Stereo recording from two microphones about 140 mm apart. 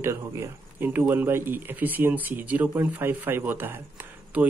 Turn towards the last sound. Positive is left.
turn(degrees=-15)  # may be behind; listen again after turning